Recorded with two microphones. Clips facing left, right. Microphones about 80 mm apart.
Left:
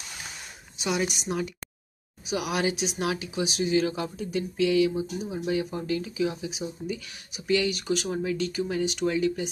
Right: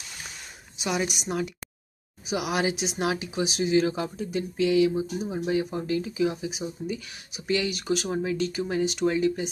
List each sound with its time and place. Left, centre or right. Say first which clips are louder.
0.7 s speech: even; centre
2.2 s speech: right 1 dB; centre
6.2 s speech: right 2 dB; centre
7.4 s speech: left 1 dB; right